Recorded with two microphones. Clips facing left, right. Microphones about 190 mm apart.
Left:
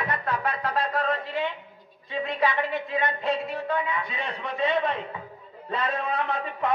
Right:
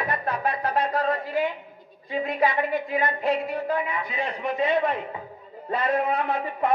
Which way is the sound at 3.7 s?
30° right (ahead or behind).